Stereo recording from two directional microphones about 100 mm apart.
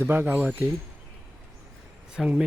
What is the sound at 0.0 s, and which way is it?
Speech, 20° right (ahead or behind).